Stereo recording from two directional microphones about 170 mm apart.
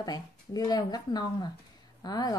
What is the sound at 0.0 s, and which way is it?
A woman's voice, 25° left (ahead or behind).